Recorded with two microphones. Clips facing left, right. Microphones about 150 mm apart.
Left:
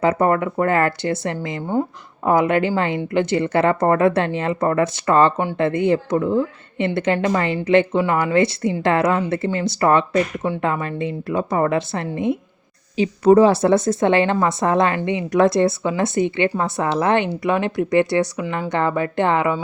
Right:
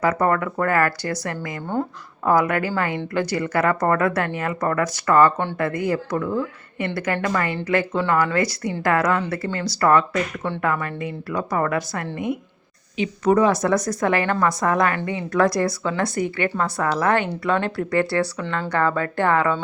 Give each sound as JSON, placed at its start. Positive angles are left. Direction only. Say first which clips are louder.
{"t": 0.0, "sound": "a woman's voice", "louder": "left 3 dB", "side_deg": 25}